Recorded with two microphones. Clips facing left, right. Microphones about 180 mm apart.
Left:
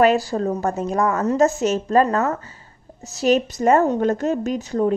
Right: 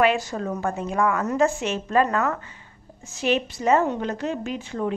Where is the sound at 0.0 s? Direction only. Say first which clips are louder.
Left 5 dB; 35° left (ahead or behind).